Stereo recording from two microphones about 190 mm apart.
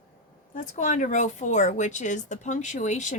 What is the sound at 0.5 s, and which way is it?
Speech, 40° left (ahead or behind).